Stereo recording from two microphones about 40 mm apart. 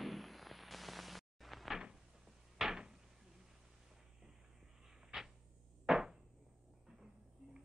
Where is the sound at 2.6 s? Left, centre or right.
Centre.